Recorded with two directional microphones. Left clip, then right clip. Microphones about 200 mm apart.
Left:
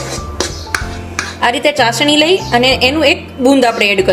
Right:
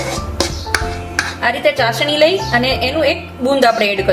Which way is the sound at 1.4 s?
45° left (ahead or behind).